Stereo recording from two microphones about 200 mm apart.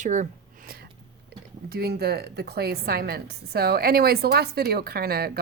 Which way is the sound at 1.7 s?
50° right (ahead or behind).